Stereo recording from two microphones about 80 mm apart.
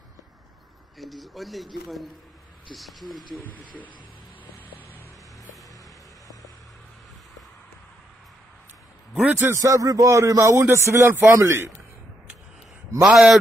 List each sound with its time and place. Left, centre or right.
0.9 s speech: centre
3.3 s speech: left
9.2 s a man's voice: right
9.6 s a man's voice: right
11.3 s a man's voice: right
13.0 s speech: centre